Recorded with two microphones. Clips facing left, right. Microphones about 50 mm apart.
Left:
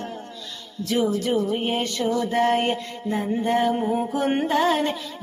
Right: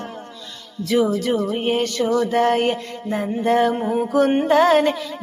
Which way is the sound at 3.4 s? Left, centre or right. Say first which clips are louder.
Right 5 dB; right.